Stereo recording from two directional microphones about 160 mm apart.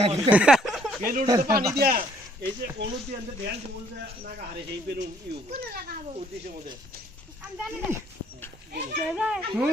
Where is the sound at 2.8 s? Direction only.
90° right.